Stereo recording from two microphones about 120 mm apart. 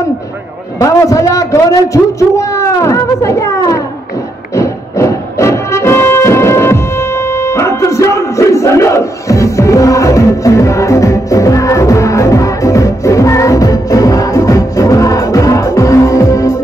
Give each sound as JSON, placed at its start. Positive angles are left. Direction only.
{"t": 0.7, "sound": "a sound", "side_deg": 30}
{"t": 4.6, "sound": "music", "side_deg": 25}
{"t": 7.3, "sound": "battle cry", "side_deg": 25}